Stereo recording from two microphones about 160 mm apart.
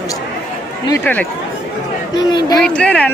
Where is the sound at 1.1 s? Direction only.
10° left (ahead or behind).